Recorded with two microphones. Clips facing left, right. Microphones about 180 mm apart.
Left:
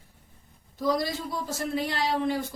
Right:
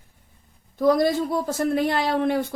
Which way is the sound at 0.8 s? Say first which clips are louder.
Right 8 dB; 55° right (ahead or behind).